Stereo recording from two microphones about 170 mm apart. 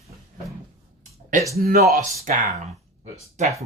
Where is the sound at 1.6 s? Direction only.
65° right (ahead or behind).